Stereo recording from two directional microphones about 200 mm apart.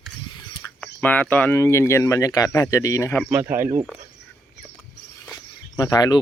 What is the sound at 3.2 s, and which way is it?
Speech, 5° right (ahead or behind).